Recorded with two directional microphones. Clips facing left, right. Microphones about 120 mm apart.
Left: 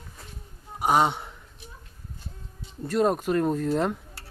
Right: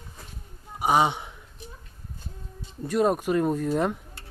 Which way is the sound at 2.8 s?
Centre (ahead or behind).